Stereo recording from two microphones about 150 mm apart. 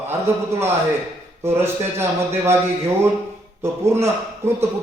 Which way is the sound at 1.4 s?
15° right (ahead or behind).